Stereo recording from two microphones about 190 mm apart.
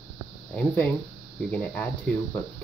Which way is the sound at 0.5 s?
10° left (ahead or behind).